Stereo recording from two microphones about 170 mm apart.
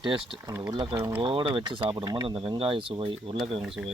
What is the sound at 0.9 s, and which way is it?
Speech, 15° right (ahead or behind).